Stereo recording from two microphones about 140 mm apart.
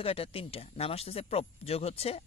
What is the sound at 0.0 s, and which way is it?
Speech, 45° left (ahead or behind).